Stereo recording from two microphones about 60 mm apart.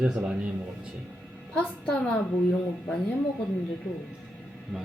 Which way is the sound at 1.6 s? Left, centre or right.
Centre.